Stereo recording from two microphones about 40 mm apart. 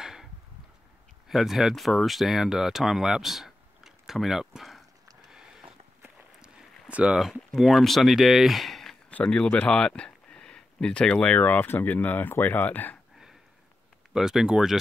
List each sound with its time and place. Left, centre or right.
0.0 s a sound: centre
1.3 s speech: centre
5.3 s a sound: centre
6.9 s speech: right
7.2 s speech: centre
9.2 s speech: left
9.7 s a sound: left
11.3 s speech: left
14.1 s speech: centre